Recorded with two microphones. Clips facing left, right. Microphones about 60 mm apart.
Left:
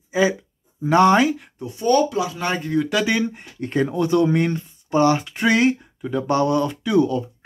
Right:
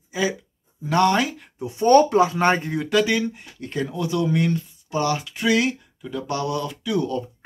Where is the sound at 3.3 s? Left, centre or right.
Left.